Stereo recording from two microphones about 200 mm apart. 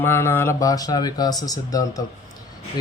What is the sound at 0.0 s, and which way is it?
Speech, 10° left (ahead or behind).